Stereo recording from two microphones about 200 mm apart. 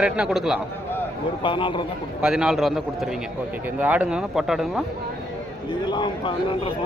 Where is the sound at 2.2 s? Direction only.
5° right (ahead or behind).